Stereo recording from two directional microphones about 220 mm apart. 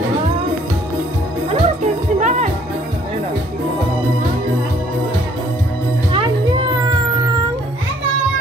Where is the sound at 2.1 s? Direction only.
30° right (ahead or behind).